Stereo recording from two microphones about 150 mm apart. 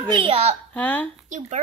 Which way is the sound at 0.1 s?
40° right (ahead or behind).